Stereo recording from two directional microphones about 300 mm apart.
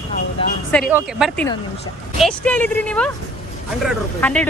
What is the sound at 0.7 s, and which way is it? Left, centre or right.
Speech, centre.